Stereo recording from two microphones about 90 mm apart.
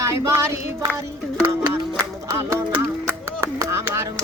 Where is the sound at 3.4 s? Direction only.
30° right (ahead or behind).